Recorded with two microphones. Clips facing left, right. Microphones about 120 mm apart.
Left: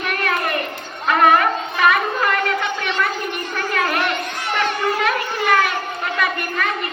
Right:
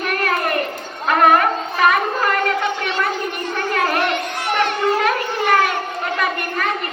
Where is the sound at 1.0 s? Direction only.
45° right (ahead or behind).